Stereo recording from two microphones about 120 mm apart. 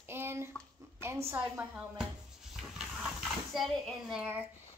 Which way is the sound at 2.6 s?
5° right (ahead or behind).